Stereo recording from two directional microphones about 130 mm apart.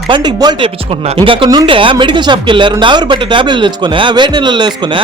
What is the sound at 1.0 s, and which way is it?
Speech, 45° right (ahead or behind).